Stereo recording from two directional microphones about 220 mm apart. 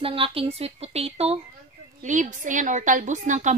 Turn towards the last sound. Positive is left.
turn(degrees=-35)  # may be behind; listen again after turning